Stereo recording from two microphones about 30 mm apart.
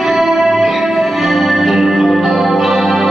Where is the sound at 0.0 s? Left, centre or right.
Centre.